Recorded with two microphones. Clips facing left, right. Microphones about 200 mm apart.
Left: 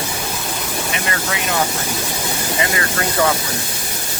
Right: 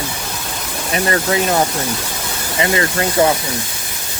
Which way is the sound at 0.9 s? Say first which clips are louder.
Right 11 dB; 35° right (ahead or behind).